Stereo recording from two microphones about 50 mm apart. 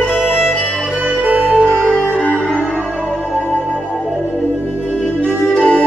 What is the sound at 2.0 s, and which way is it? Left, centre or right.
Music, left.